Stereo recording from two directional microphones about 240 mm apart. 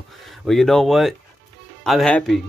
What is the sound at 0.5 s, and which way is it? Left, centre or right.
Speech, centre.